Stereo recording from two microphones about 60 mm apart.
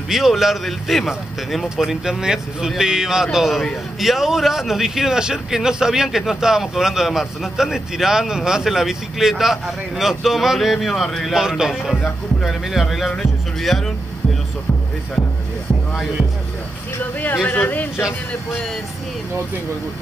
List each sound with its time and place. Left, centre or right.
0.1 s speech: centre
11.3 s music: centre
12.4 s speech: centre
17.0 s speech: left